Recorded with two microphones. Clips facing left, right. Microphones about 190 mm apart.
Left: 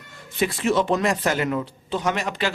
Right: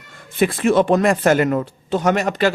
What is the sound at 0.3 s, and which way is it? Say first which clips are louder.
A man's voice: right 6 dB; 55° right (ahead or behind).